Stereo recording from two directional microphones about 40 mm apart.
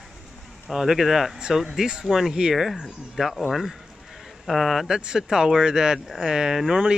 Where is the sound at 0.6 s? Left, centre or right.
Centre.